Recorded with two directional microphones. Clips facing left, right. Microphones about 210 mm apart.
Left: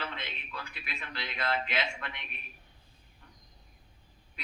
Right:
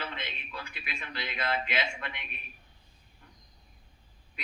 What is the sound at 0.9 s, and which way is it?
A man's voice, 5° right (ahead or behind).